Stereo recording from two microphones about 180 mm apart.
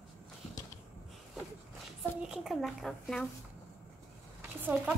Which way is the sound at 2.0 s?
5° right (ahead or behind).